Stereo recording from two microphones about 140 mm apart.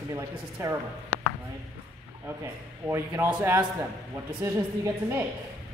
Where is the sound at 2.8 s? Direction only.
20° right (ahead or behind).